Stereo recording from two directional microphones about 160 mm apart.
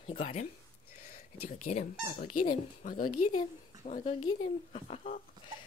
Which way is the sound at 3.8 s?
45° left (ahead or behind).